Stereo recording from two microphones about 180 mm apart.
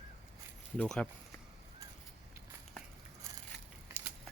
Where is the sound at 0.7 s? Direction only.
5° left (ahead or behind).